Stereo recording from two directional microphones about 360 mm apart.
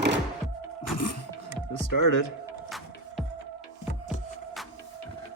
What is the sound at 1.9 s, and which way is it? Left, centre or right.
Speech, left.